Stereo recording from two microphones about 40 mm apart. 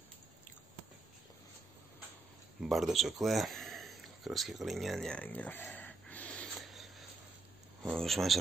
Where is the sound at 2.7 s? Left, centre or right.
Centre.